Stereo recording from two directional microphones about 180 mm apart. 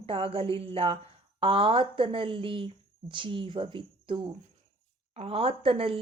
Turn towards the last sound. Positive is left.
turn(degrees=-30)  # may be behind; listen again after turning